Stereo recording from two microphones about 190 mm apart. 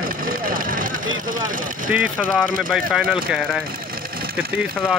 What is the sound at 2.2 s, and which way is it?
Speech, 5° left (ahead or behind).